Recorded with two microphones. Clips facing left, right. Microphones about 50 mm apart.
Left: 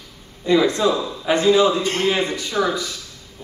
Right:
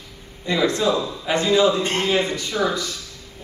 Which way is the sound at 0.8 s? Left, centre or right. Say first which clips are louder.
Left 2 dB; centre.